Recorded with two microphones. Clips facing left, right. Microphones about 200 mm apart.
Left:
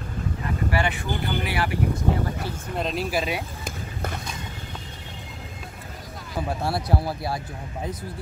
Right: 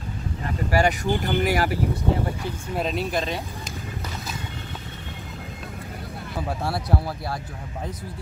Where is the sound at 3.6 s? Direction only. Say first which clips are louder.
Left 2 dB; 55° left (ahead or behind).